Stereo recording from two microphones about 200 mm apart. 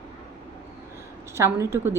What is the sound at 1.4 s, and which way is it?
Speech, 15° right (ahead or behind).